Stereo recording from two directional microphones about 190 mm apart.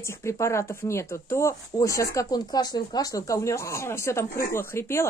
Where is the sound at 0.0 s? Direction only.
15° left (ahead or behind).